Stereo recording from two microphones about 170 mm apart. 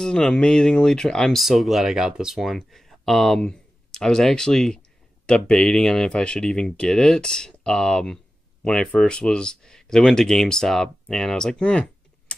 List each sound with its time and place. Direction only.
0.0 s speech: 5° left (ahead or behind)